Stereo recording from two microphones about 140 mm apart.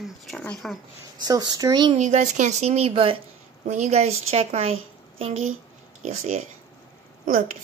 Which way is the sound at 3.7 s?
55° right (ahead or behind).